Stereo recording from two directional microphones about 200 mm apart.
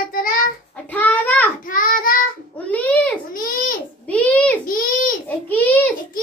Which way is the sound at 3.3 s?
45° left (ahead or behind).